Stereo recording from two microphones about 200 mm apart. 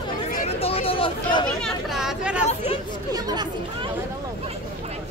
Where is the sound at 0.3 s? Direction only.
35° left (ahead or behind).